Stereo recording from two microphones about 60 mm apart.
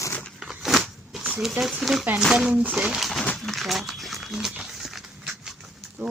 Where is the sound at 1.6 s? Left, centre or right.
Centre.